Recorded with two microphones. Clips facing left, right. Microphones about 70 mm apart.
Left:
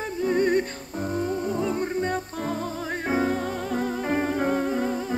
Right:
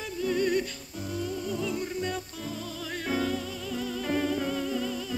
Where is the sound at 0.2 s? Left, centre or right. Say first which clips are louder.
Left 5 dB; left.